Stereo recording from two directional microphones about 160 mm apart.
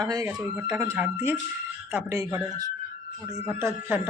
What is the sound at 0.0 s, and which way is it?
A man's voice, 25° right (ahead or behind).